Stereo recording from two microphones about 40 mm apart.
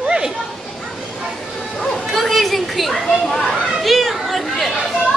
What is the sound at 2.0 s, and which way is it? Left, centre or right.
Children playing, centre.